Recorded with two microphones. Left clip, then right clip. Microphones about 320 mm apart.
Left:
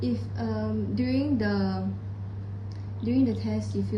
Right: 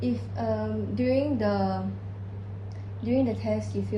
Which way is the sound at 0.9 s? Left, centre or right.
Centre.